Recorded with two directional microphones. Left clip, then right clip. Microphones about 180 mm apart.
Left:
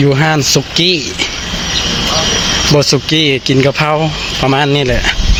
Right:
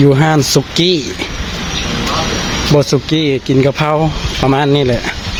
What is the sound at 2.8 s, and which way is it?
Speech, 10° right (ahead or behind).